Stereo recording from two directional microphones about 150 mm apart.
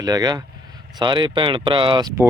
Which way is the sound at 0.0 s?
25° right (ahead or behind).